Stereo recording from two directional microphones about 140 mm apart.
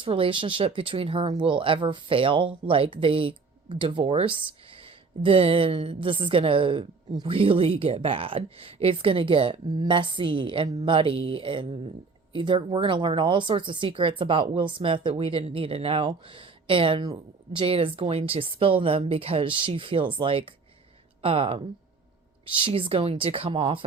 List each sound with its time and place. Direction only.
0.0 s speech: 40° right (ahead or behind)